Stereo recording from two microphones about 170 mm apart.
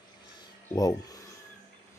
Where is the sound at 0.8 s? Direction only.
20° left (ahead or behind).